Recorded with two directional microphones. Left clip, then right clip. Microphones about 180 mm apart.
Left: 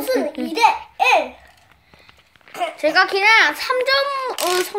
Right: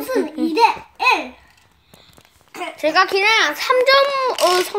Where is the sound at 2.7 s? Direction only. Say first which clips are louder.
Right 1 dB; centre (ahead or behind).